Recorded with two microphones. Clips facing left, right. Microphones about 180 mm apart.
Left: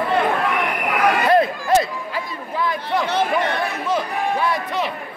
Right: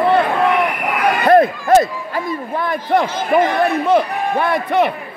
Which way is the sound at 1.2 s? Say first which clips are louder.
Right 9 dB; 50° right (ahead or behind).